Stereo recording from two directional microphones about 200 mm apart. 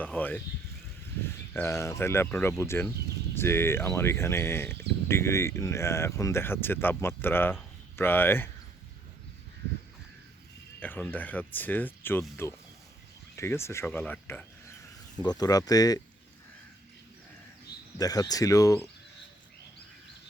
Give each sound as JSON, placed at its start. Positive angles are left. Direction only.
{"t": 0.0, "sound": "a sound", "side_deg": 10}
{"t": 1.5, "sound": "speech", "side_deg": 15}
{"t": 10.8, "sound": "speech", "side_deg": 10}
{"t": 15.2, "sound": "speech", "side_deg": 20}
{"t": 17.9, "sound": "speech", "side_deg": 20}